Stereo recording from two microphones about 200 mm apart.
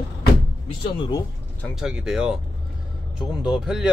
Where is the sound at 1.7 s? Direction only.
Centre (ahead or behind).